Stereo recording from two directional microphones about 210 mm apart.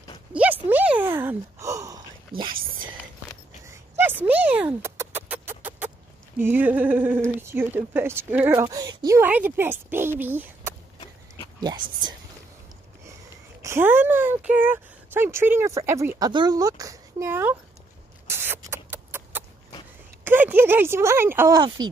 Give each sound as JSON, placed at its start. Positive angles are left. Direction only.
{"t": 0.3, "sound": "a sound", "side_deg": -10}
{"t": 3.6, "sound": "chicken", "side_deg": -15}
{"t": 6.4, "sound": "speech", "side_deg": -10}
{"t": 11.6, "sound": "speech", "side_deg": -20}
{"t": 13.6, "sound": "speech", "side_deg": -10}
{"t": 18.2, "sound": "a sound", "side_deg": -10}
{"t": 20.2, "sound": "speech", "side_deg": -10}